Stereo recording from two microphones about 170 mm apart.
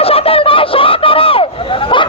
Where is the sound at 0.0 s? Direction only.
35° left (ahead or behind).